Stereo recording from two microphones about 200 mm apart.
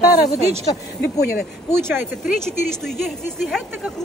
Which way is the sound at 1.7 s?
10° right (ahead or behind).